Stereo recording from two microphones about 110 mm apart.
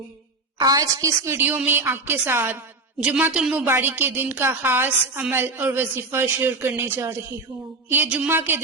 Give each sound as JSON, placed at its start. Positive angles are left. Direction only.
{"t": 0.6, "sound": "a man's voice", "side_deg": -35}